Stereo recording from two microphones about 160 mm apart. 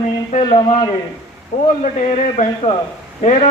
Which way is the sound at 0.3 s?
45° left (ahead or behind).